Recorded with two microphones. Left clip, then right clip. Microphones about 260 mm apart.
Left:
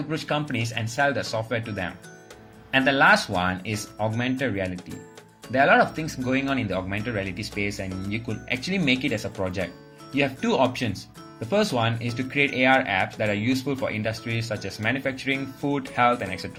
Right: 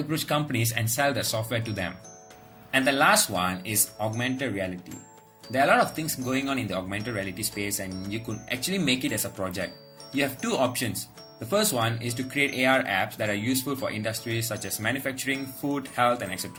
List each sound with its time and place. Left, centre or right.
0.1 s speech: centre